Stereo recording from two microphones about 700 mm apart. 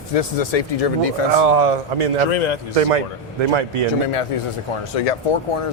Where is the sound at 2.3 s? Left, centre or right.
Left.